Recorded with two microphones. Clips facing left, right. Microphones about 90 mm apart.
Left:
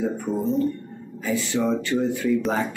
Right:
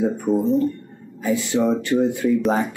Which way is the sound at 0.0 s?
15° right (ahead or behind).